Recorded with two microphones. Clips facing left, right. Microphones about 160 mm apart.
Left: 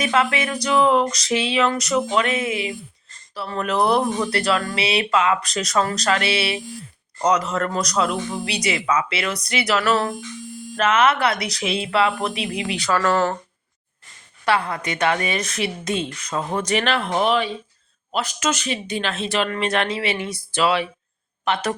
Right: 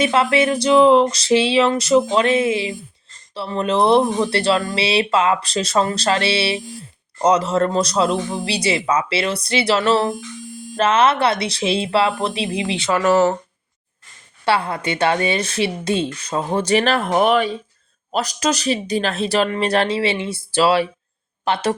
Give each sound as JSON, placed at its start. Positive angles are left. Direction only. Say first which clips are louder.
{"t": 0.0, "sound": "speech", "louder": "right 5 dB", "side_deg": -30}
{"t": 14.4, "sound": "speech", "louder": "right 2 dB", "side_deg": -30}
{"t": 18.1, "sound": "speech", "louder": "right 3 dB", "side_deg": -40}